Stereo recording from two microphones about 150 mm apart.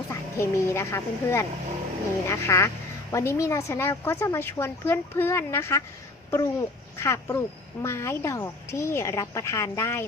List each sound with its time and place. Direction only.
0.1 s a woman's voice: 20° left (ahead or behind)